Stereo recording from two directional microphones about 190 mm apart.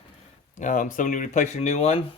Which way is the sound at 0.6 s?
40° left (ahead or behind).